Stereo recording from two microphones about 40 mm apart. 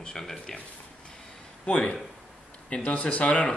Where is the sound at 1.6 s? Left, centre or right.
Left.